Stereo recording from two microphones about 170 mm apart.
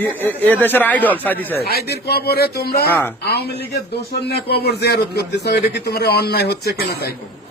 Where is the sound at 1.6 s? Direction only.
65° left (ahead or behind).